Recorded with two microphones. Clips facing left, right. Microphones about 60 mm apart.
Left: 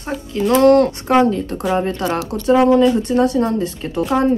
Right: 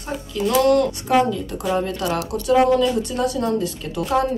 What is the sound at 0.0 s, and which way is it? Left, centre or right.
A woman's voice, left.